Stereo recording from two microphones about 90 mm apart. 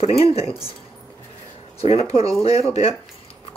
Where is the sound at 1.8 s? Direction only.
90° left.